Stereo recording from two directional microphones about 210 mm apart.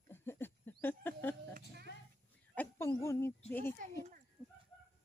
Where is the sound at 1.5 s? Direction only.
50° right (ahead or behind).